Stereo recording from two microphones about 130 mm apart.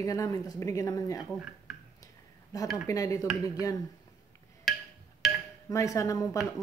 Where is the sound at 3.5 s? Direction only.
25° left (ahead or behind).